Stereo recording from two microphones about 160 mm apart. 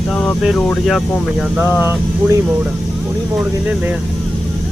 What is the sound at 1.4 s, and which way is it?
Speech, 10° right (ahead or behind).